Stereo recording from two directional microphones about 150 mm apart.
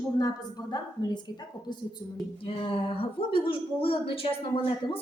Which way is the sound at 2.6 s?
40° left (ahead or behind).